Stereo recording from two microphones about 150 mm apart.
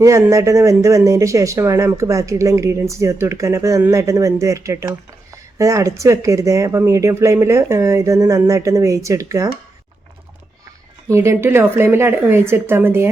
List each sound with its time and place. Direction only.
0.0 s speech: 20° right (ahead or behind)
11.1 s a woman's voice: 20° right (ahead or behind)